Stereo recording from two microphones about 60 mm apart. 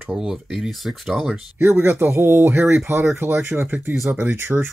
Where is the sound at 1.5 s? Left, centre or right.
Right.